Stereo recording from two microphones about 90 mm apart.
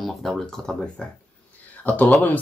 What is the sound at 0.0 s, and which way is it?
Speech, centre (ahead or behind).